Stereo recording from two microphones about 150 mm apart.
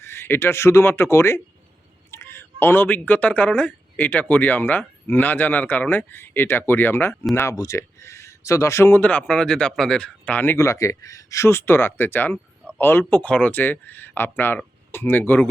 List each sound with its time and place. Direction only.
0.0 s speech: 15° left (ahead or behind)